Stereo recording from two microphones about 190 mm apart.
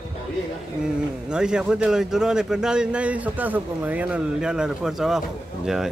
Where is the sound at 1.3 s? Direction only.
5° right (ahead or behind).